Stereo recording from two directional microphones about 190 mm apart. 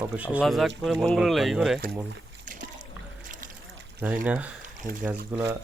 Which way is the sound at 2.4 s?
40° right (ahead or behind).